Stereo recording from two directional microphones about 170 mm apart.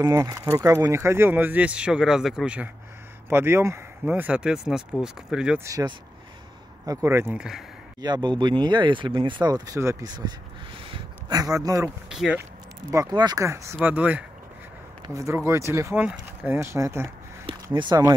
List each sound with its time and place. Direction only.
0.0 s speech: 20° right (ahead or behind)
5.6 s speech: 20° right (ahead or behind); by 7.6 s 5° right (ahead or behind)
8.0 s speech: 25° right (ahead or behind)
12.1 s speech: 5° right (ahead or behind)
12.9 s speech: 20° right (ahead or behind)